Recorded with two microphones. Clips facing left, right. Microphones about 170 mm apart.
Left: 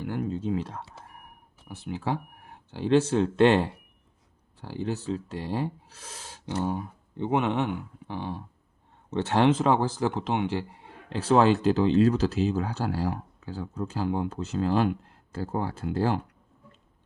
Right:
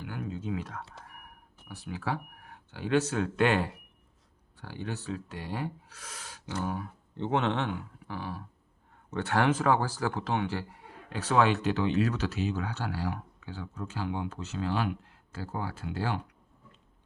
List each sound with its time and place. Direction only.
0.0 s speech: 35° left (ahead or behind)
7.2 s speech: 10° left (ahead or behind); by 16.3 s 40° left (ahead or behind)